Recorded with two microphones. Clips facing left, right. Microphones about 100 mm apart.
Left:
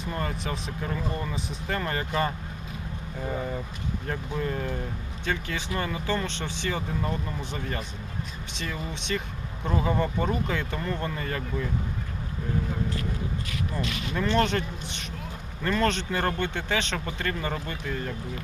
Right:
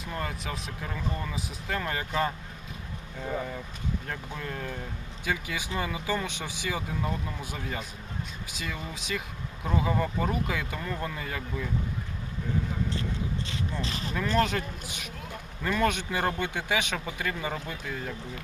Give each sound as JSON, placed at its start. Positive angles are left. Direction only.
{"t": 0.0, "sound": "speech", "side_deg": 0}
{"t": 5.2, "sound": "speech", "side_deg": -10}
{"t": 13.8, "sound": "speech", "side_deg": -35}
{"t": 14.1, "sound": "speech", "side_deg": 0}